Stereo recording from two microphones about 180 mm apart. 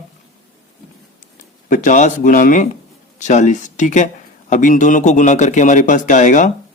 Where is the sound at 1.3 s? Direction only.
45° left (ahead or behind).